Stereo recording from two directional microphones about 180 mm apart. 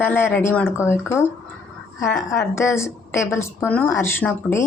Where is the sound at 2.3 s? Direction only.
15° left (ahead or behind).